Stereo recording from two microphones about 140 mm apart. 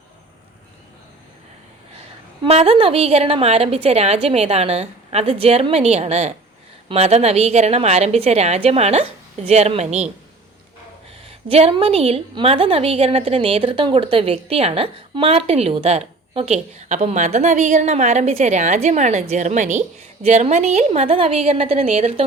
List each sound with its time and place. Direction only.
2.4 s a woman's voice: 45° right (ahead or behind)
11.3 s a woman's voice: 45° right (ahead or behind)
16.9 s a woman's voice: 55° right (ahead or behind)